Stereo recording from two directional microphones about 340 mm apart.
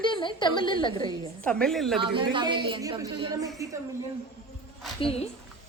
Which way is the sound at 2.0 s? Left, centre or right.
Centre.